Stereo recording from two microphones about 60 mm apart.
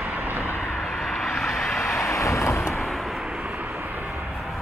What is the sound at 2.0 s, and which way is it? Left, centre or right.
Vehicle, left.